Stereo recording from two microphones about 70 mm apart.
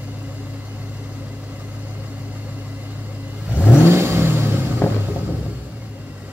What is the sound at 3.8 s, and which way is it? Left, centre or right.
Vehicle, right.